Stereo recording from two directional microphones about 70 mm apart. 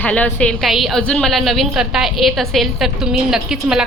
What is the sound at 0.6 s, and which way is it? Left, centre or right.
A woman's voice, centre.